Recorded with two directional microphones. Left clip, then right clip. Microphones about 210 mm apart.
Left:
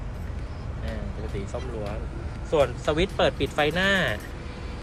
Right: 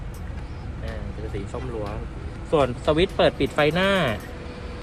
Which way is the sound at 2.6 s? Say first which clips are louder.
Right 4 dB; 35° right (ahead or behind).